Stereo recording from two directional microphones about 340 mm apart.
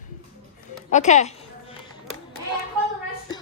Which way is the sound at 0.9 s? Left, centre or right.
Left.